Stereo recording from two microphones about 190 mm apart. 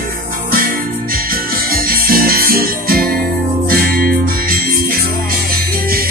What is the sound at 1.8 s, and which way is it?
Music, 50° right (ahead or behind).